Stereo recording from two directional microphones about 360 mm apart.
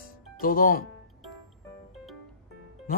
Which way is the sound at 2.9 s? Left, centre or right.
Left.